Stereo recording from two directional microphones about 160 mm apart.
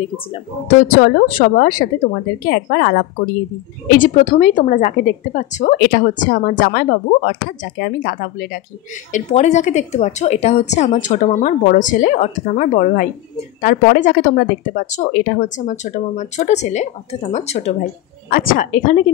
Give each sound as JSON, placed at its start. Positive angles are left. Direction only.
{"t": 0.9, "sound": "speech", "side_deg": 65}
{"t": 4.0, "sound": "a woman's voice", "side_deg": 50}
{"t": 5.8, "sound": "speech", "side_deg": 65}
{"t": 9.1, "sound": "a woman's voice", "side_deg": 45}
{"t": 18.3, "sound": "speech", "side_deg": 65}